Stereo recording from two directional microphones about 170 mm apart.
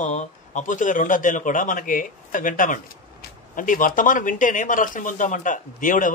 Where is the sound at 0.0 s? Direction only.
45° left (ahead or behind).